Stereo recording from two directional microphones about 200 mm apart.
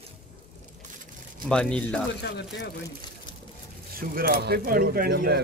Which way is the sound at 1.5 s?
5° left (ahead or behind).